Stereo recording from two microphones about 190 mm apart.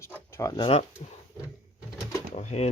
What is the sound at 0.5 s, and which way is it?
Speech, 30° left (ahead or behind).